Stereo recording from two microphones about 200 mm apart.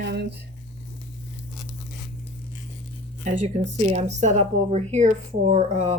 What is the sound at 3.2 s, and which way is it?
Speech, 35° right (ahead or behind).